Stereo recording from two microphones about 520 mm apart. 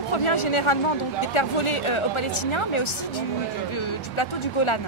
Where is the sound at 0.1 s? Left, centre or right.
Left.